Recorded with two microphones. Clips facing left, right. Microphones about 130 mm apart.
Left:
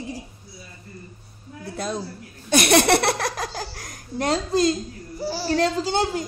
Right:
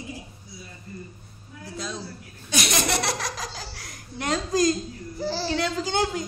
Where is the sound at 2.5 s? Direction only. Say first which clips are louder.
Left 9 dB; 60° left (ahead or behind); by 4.7 s 30° left (ahead or behind).